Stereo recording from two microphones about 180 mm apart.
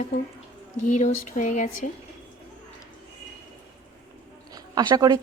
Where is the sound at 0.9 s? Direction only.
45° left (ahead or behind).